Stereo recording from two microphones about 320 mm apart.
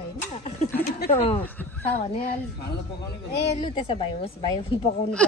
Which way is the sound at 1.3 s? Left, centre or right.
Centre.